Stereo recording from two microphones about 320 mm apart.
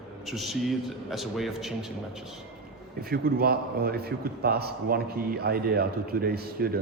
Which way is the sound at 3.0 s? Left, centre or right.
Right.